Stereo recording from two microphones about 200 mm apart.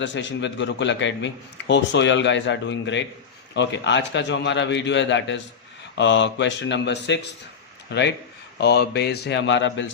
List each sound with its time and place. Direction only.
0.0 s a man's voice: 65° left (ahead or behind)